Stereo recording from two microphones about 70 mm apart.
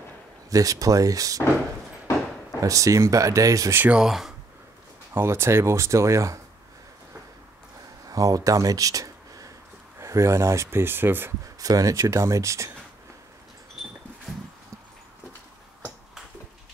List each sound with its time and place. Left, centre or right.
0.5 s speech: right
2.6 s speech: right
3.9 s speech: centre
5.1 s speech: right
8.1 s speech: right
8.5 s a sound: right
9.9 s speech: right
11.4 s speech: right